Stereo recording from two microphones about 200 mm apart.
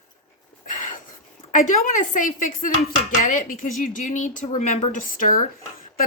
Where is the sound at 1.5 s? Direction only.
40° left (ahead or behind).